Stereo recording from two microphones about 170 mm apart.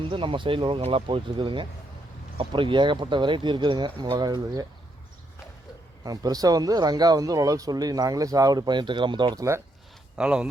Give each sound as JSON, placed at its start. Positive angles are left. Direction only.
{"t": 0.0, "sound": "speech", "side_deg": -30}
{"t": 6.0, "sound": "speech", "side_deg": -20}
{"t": 10.2, "sound": "speech", "side_deg": -5}